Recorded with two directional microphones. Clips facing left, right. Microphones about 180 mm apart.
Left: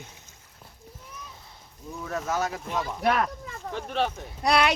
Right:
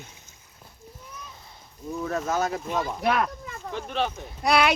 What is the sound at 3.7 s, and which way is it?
Speech, 45° left (ahead or behind).